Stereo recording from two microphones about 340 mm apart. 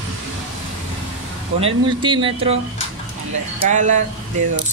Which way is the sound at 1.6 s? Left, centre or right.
Centre.